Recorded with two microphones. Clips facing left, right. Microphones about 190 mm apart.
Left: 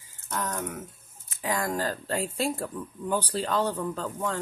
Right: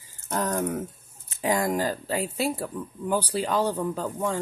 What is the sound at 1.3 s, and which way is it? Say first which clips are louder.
Speech: right 4 dB; 20° right (ahead or behind).